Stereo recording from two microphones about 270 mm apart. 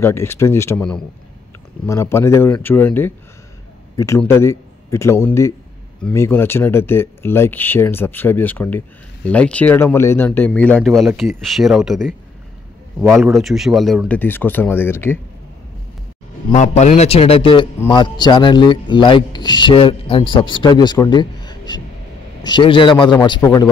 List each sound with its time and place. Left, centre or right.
0.0 s a man's voice: centre
16.5 s a man's voice: left